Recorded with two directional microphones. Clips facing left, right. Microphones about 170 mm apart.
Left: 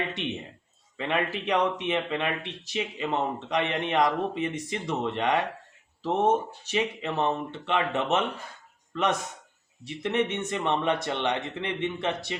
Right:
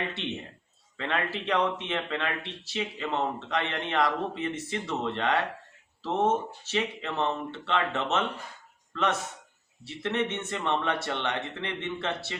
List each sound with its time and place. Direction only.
0.9 s speech: 15° left (ahead or behind)